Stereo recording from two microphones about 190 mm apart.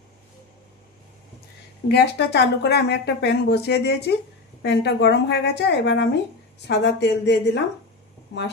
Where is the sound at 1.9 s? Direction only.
60° left (ahead or behind).